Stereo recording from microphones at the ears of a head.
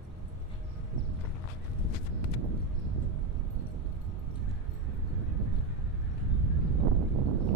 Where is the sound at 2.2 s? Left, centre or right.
Right.